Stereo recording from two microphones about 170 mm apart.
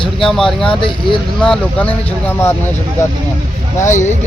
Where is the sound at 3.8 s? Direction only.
45° left (ahead or behind).